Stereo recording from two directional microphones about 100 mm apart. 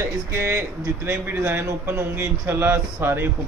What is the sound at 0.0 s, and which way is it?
A man's voice, 25° right (ahead or behind).